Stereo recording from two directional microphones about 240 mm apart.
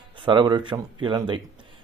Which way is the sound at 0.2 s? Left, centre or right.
Centre.